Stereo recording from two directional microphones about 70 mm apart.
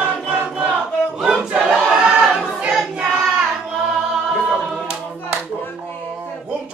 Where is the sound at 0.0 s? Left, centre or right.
Right.